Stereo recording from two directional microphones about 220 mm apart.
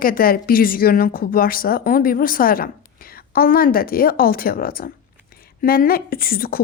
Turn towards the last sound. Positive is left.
turn(degrees=40)  # may be behind; listen again after turning